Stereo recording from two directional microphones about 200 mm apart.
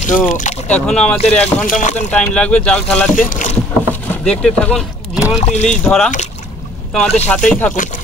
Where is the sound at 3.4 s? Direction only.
40° left (ahead or behind).